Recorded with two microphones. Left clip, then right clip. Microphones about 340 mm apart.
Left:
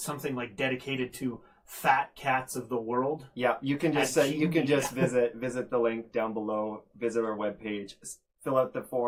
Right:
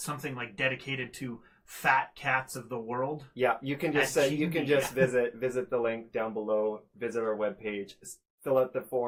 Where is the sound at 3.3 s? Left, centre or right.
Right.